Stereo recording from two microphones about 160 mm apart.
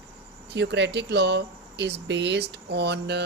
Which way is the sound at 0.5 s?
90° right.